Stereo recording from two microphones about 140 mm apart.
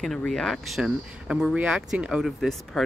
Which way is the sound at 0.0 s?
5° left (ahead or behind).